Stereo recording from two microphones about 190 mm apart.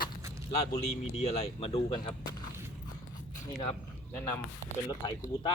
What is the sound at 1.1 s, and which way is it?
Speech, 35° left (ahead or behind).